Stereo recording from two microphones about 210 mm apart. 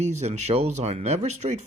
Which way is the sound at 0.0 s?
30° right (ahead or behind).